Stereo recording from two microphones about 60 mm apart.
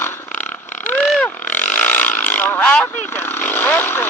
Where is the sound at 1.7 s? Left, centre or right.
Left.